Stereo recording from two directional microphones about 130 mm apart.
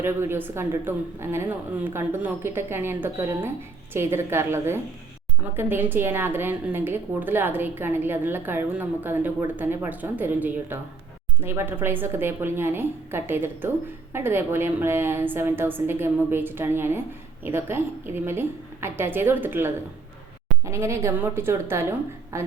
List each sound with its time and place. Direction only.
0.0 s a woman's voice: 20° right (ahead or behind)